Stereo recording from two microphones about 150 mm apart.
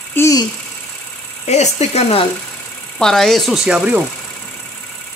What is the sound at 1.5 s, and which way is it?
Speech, 45° left (ahead or behind).